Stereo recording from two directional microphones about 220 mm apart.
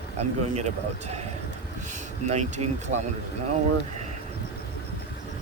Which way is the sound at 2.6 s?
90° right.